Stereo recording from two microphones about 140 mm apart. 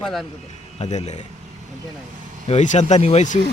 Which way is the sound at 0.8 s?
55° left (ahead or behind).